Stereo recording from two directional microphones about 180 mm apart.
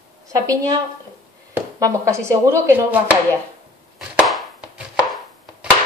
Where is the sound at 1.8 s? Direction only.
15° right (ahead or behind).